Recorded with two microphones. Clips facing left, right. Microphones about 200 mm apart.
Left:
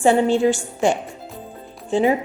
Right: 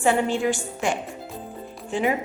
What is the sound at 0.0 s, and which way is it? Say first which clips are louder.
Speech: left 6 dB; 30° left (ahead or behind).